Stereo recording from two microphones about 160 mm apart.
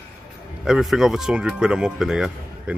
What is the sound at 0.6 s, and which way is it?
Speech, 5° right (ahead or behind).